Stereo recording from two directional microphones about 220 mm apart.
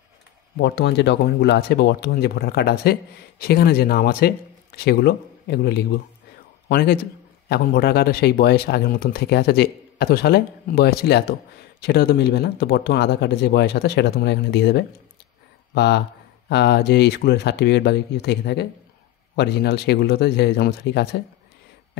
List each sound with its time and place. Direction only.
0.6 s speech: 50° left (ahead or behind)